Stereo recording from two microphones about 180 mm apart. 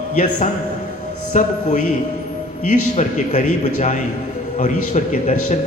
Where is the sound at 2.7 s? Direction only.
40° left (ahead or behind).